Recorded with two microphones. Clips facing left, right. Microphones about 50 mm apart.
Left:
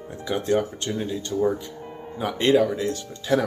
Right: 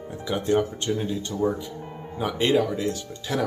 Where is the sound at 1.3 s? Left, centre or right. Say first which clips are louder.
Left 3 dB; centre.